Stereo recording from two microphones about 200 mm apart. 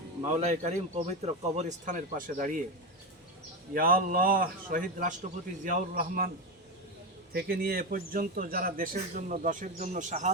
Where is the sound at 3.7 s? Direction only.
45° right (ahead or behind).